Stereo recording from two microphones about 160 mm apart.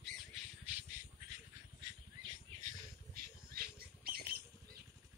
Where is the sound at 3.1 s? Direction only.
70° right (ahead or behind).